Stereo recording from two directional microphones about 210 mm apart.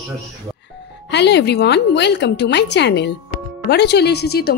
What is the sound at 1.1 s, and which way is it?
A woman's voice, 55° left (ahead or behind).